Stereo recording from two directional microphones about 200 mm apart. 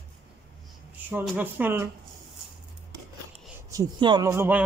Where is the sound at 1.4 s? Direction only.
10° right (ahead or behind).